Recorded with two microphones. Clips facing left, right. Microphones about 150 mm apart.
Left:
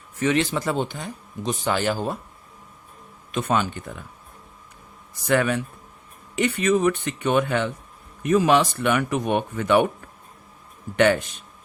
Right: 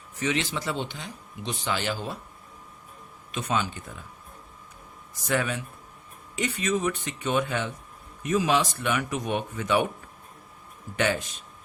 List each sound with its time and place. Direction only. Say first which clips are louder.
0.2 s speech: left 6 dB; 50° left (ahead or behind)
3.3 s speech: left 5 dB; 55° left (ahead or behind)
5.3 s speech: left 6 dB; 60° left (ahead or behind)
10.9 s speech: left 8 dB; 60° left (ahead or behind)